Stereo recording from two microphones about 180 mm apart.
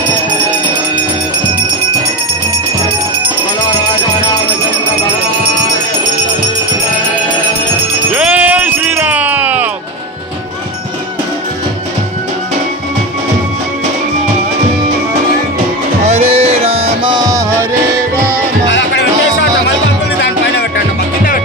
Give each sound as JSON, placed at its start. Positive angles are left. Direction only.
{"t": 8.1, "sound": "music", "side_deg": -10}
{"t": 16.0, "sound": "music", "side_deg": -35}